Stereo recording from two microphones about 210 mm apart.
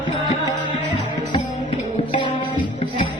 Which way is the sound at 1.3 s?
25° left (ahead or behind).